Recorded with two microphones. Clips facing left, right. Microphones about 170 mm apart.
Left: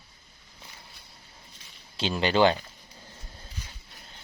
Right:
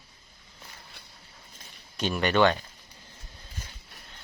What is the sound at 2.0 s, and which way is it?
Speech, 30° left (ahead or behind).